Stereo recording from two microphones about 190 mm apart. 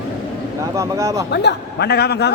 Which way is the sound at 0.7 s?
15° right (ahead or behind).